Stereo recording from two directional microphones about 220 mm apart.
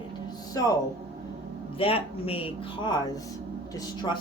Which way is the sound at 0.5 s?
15° left (ahead or behind).